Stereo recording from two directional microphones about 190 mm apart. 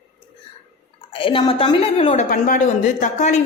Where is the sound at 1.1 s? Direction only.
25° left (ahead or behind).